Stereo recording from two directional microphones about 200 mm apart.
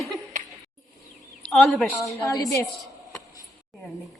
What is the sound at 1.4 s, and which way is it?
Speech, centre (ahead or behind).